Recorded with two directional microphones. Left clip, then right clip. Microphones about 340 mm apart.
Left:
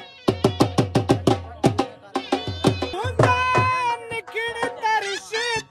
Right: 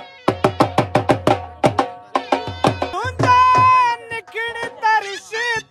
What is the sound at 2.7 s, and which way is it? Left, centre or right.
Music, centre.